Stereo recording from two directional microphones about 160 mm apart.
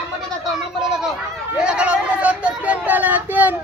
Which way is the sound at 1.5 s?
5° right (ahead or behind).